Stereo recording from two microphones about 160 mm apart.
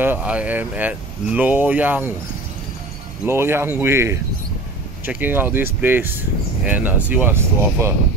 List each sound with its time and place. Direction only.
0.0 s speech: 10° right (ahead or behind)
3.3 s speech: 15° right (ahead or behind)